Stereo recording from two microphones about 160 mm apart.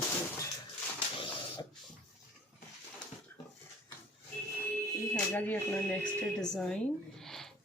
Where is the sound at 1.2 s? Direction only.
30° left (ahead or behind).